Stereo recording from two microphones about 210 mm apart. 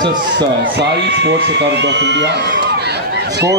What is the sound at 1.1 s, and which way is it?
Speech, 55° right (ahead or behind).